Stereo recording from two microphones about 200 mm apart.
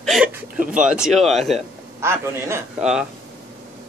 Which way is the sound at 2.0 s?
15° right (ahead or behind).